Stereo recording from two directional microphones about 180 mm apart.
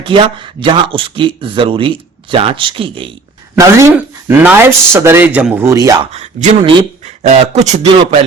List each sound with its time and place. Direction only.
0.0 s speech: 30° right (ahead or behind)
3.5 s speech: 15° right (ahead or behind)
6.1 s speech: 35° right (ahead or behind)